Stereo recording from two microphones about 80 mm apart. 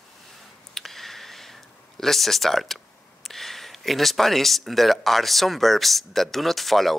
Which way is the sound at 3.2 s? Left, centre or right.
Centre.